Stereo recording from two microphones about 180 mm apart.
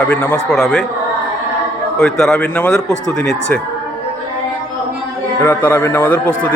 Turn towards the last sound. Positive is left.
turn(degrees=5)  # may be behind; listen again after turning